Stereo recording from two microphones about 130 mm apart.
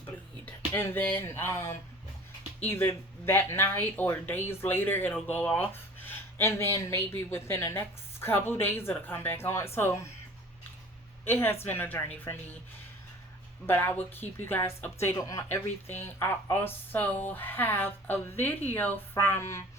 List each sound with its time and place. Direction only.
0.4 s a sound: 15° left (ahead or behind)
2.6 s speech: 20° left (ahead or behind)
11.3 s speech: 20° left (ahead or behind)
13.7 s speech: 15° left (ahead or behind)